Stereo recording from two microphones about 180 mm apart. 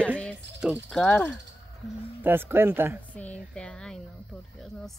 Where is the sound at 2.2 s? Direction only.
10° right (ahead or behind).